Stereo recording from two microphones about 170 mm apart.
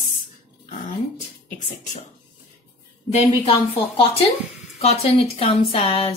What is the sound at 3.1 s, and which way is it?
Speech, 35° left (ahead or behind).